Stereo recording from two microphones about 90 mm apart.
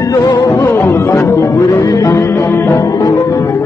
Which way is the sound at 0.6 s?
30° left (ahead or behind).